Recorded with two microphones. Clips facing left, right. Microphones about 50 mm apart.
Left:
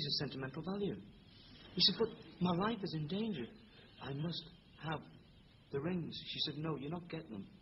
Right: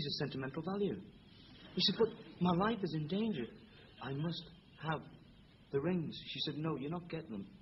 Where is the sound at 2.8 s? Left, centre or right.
Centre.